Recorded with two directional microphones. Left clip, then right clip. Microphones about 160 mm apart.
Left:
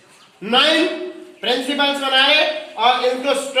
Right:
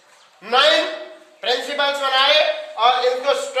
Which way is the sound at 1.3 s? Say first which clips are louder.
Left 1 dB; 20° right (ahead or behind).